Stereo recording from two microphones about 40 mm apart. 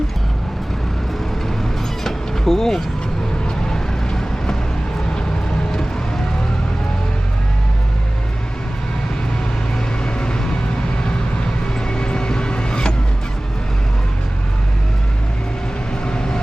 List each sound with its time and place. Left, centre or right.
2.0 s vehicle: centre
10.0 s vehicle: left
11.9 s vehicle: left
16.0 s vehicle: left